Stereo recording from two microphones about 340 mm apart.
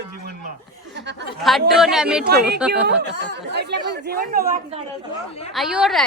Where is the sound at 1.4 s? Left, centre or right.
Centre.